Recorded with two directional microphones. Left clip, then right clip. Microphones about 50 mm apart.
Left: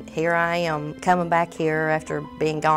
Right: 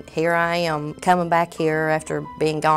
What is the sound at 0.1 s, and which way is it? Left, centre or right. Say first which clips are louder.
Speech: right 2 dB; right.